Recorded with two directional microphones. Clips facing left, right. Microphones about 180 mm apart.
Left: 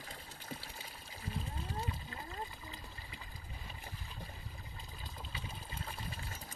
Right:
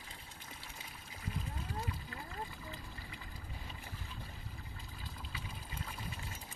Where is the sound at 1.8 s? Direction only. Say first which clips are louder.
Left 1 dB; 25° left (ahead or behind).